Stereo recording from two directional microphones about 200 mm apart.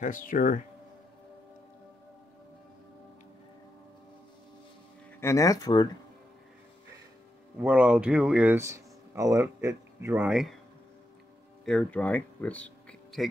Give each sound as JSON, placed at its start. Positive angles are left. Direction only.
{"t": 0.0, "sound": "speech", "side_deg": 40}
{"t": 5.2, "sound": "speech", "side_deg": 15}
{"t": 7.5, "sound": "speech", "side_deg": -10}
{"t": 11.6, "sound": "speech", "side_deg": 5}